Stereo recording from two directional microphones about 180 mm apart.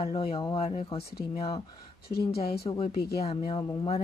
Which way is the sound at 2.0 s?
60° left (ahead or behind).